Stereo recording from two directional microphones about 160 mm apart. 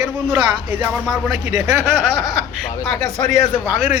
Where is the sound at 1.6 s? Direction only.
15° right (ahead or behind).